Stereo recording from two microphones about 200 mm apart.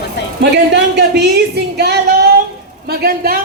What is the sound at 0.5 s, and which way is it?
Speech, 60° right (ahead or behind).